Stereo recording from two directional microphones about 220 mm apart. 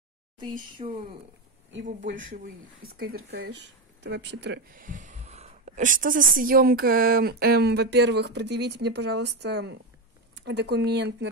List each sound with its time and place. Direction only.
0.8 s speech: 25° right (ahead or behind)
2.0 s a woman's voice: 60° right (ahead or behind)
4.8 s a woman's voice: 35° right (ahead or behind)